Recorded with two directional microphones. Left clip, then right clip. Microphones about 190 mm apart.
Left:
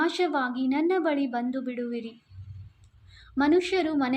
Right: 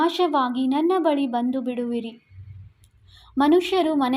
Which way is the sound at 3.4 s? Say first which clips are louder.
Right 5 dB; 25° right (ahead or behind).